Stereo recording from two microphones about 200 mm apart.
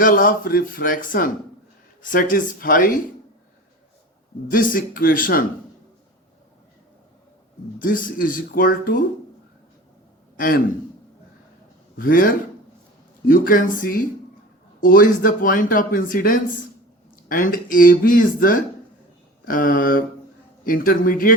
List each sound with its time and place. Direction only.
0.0 s speech: 45° left (ahead or behind)
4.5 s speech: 45° left (ahead or behind)
7.8 s speech: 45° left (ahead or behind)
10.3 s a man's voice: 45° left (ahead or behind)
11.9 s speech: 45° left (ahead or behind)